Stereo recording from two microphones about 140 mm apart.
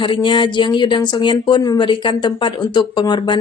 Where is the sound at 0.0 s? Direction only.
35° left (ahead or behind).